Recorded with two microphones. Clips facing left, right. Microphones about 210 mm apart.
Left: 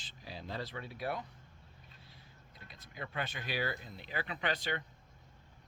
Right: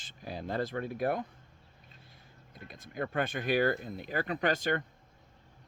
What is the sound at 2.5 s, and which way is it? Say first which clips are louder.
Speech: right 10 dB; 50° right (ahead or behind).